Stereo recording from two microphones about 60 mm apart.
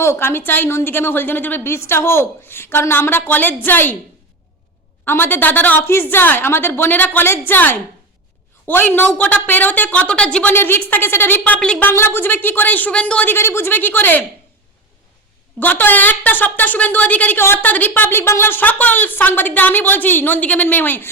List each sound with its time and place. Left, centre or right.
0.0 s a woman's voice: left
1.6 s a woman's voice: left
5.0 s a woman's voice: left
5.8 s a woman's voice: left; by 10.5 s centre
10.5 s a woman's voice: left
11.8 s a woman's voice: left; by 13.2 s centre
13.2 s a woman's voice: left
15.6 s a woman's voice: left
17.3 s a woman's voice: left